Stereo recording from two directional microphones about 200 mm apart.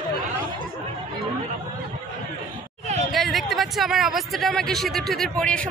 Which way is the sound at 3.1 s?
Centre (ahead or behind).